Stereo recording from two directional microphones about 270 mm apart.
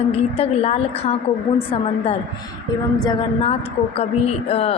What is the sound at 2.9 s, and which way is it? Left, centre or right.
Speech, centre.